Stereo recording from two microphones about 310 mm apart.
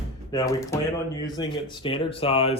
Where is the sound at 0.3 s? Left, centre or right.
Centre.